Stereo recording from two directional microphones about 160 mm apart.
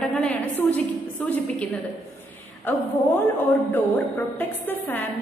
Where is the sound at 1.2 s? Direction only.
10° left (ahead or behind).